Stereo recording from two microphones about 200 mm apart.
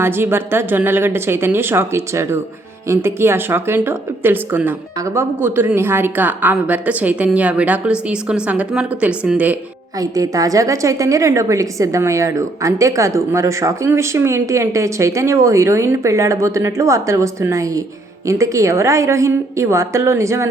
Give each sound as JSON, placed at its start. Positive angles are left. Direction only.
{"t": 0.0, "sound": "a woman's voice", "side_deg": -10}
{"t": 10.0, "sound": "a woman's voice", "side_deg": -15}